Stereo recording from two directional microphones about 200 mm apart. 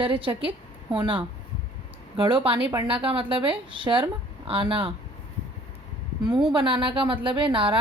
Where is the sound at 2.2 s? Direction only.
25° right (ahead or behind).